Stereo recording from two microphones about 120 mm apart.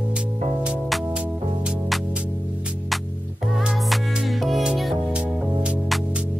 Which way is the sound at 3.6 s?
5° right (ahead or behind).